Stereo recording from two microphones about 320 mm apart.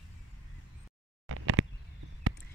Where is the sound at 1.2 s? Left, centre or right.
Right.